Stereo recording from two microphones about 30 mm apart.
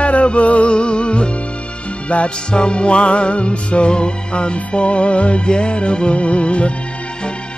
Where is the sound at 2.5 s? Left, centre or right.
Left.